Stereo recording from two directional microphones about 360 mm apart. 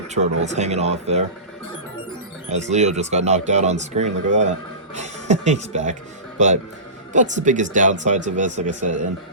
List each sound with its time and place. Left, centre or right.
0.1 s speech: centre
2.5 s speech: centre